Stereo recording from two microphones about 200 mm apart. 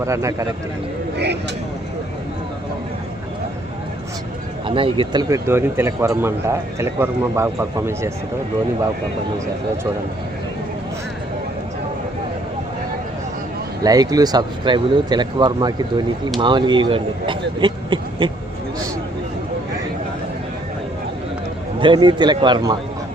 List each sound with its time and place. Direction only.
0.0 s speech: 15° right (ahead or behind)
4.6 s speech: 25° right (ahead or behind)
5.3 s speech: 10° right (ahead or behind)
13.8 s speech: 20° right (ahead or behind)
21.8 s speech: 25° right (ahead or behind)